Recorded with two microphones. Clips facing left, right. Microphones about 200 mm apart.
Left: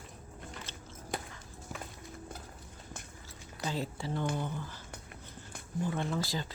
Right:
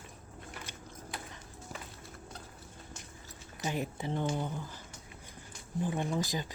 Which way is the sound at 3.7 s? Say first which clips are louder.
Right 1 dB; 20° right (ahead or behind).